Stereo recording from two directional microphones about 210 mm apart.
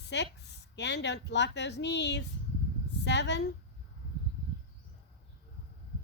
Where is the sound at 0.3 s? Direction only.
55° left (ahead or behind).